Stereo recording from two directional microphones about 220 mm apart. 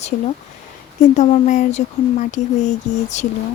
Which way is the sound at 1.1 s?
35° left (ahead or behind).